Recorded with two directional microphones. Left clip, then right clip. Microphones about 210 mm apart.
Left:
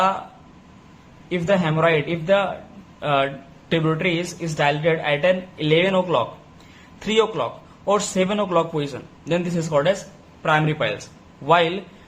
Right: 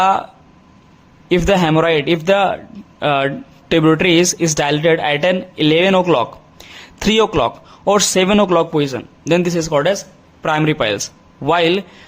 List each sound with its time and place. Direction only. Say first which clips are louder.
1.3 s speech: right 7 dB; 50° right (ahead or behind)